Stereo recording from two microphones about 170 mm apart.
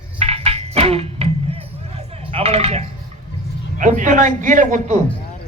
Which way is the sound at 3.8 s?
50° right (ahead or behind).